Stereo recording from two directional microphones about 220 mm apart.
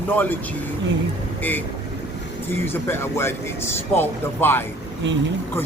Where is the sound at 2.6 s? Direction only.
10° left (ahead or behind).